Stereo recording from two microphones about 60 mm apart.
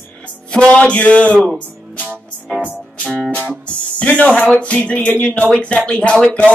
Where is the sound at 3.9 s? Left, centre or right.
Left.